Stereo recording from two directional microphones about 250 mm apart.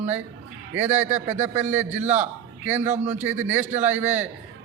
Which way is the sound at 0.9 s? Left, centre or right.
Right.